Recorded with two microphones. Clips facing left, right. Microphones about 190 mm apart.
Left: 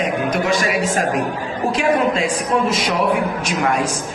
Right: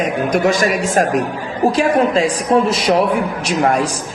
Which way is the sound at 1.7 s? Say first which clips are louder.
Right 1 dB; 35° right (ahead or behind).